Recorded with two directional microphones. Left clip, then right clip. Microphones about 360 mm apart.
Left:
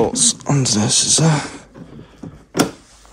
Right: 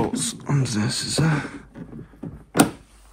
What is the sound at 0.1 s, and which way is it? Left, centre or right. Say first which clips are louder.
Speech: left 9 dB; centre.